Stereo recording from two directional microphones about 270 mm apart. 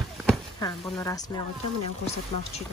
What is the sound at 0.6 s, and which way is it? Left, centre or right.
Speech, centre.